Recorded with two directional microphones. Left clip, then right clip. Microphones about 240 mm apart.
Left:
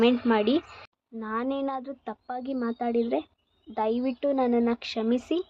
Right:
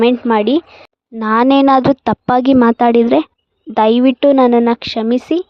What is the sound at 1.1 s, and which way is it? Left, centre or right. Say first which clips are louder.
A woman's voice: right 19 dB; right.